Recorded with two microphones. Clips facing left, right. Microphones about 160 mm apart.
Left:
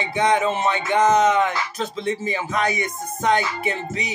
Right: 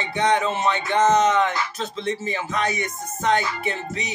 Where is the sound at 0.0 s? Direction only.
15° left (ahead or behind).